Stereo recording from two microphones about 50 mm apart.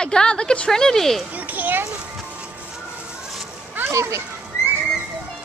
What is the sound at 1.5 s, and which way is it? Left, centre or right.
Speech, right.